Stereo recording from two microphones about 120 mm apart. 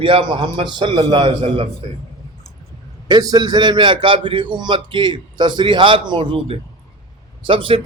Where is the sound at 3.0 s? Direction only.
35° right (ahead or behind).